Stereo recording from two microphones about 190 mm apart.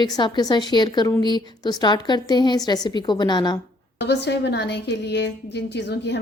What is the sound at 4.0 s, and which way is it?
A woman's voice, 65° left (ahead or behind).